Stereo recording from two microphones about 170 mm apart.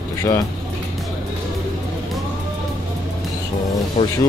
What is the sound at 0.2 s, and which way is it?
Speech, 20° left (ahead or behind).